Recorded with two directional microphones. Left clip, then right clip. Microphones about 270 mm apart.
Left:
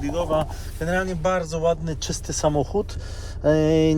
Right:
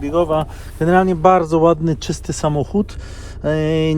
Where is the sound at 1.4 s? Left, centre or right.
Centre.